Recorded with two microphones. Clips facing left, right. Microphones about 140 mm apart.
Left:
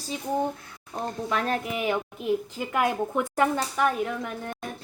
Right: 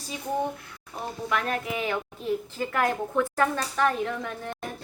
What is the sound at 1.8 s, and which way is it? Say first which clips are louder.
A woman's voice: left 2 dB; 15° left (ahead or behind).